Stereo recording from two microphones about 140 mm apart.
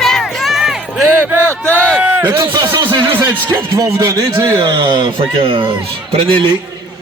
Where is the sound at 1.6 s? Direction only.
10° left (ahead or behind).